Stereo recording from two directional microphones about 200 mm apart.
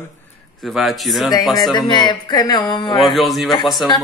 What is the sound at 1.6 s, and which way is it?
Speech, 20° left (ahead or behind).